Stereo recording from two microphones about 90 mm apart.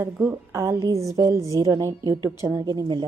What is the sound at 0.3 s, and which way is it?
Speech, 30° right (ahead or behind).